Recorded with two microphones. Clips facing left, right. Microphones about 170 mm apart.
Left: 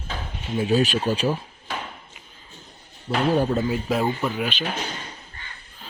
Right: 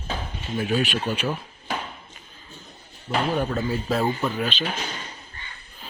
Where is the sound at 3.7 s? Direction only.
10° left (ahead or behind).